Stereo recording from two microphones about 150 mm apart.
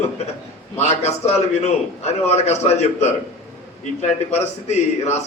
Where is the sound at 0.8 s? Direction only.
45° left (ahead or behind).